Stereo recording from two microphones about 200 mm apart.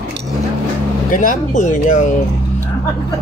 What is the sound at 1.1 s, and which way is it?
Speech, 40° left (ahead or behind).